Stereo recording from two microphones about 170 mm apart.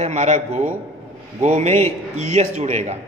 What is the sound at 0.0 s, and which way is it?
A man's voice, 40° right (ahead or behind).